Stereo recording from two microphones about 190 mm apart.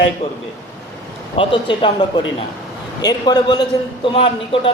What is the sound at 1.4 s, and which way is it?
A man's voice, 25° left (ahead or behind).